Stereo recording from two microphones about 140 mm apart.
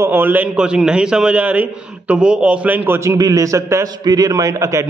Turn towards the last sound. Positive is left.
turn(degrees=-20)  # may be behind; listen again after turning